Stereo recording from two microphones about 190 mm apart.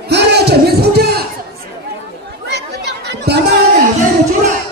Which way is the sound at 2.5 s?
60° right (ahead or behind).